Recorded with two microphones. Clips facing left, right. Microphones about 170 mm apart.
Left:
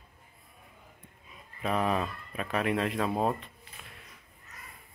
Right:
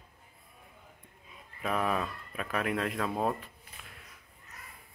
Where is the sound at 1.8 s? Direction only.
25° left (ahead or behind).